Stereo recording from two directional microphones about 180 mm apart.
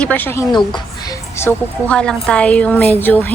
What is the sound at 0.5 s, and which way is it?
A woman's voice, 20° left (ahead or behind).